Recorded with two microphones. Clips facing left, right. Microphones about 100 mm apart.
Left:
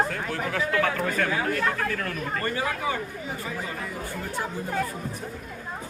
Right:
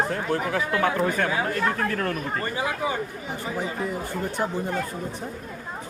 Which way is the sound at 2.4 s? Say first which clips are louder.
Even; 20° right (ahead or behind).